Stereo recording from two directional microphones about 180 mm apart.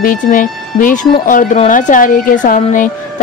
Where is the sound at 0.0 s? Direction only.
45° left (ahead or behind).